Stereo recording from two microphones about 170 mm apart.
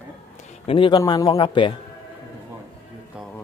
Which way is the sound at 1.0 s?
20° left (ahead or behind).